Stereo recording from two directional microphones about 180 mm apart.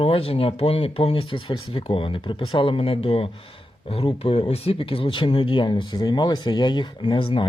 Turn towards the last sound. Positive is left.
turn(degrees=25)  # may be behind; listen again after turning